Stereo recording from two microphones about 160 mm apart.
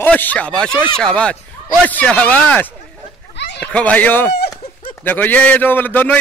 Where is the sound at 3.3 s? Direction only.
90° left.